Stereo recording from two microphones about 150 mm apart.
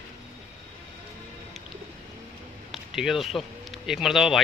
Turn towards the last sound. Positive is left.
turn(degrees=0)  # may be behind; listen again after turning